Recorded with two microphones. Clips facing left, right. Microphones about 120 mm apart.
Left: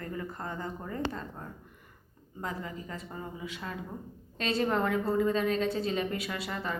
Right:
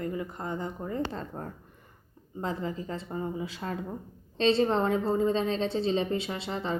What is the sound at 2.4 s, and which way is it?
A woman's voice, 30° right (ahead or behind).